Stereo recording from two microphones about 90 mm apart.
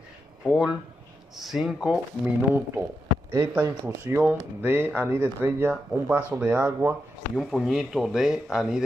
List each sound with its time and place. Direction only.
0.5 s speech: 10° right (ahead or behind)
2.2 s speech: 25° right (ahead or behind)
3.8 s speech: 20° right (ahead or behind)
7.3 s speech: 5° right (ahead or behind)